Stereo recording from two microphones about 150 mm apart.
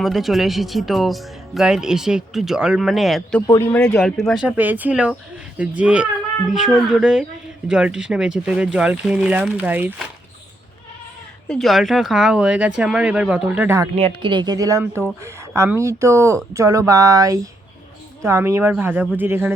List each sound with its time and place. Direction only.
0.0 s speech: centre (ahead or behind)
3.4 s speech: 20° left (ahead or behind); by 4.4 s 5° left (ahead or behind)
4.4 s speech: 10° right (ahead or behind)
11.4 s speech: 5° left (ahead or behind)
13.9 s speech: 40° right (ahead or behind); by 19.5 s 15° right (ahead or behind)